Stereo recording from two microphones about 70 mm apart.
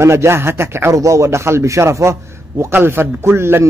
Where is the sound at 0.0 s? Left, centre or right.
Right.